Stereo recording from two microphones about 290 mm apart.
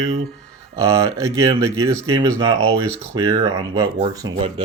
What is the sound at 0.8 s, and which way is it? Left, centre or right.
Speech, centre.